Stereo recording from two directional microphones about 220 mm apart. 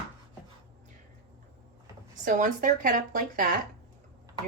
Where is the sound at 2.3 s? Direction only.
35° right (ahead or behind).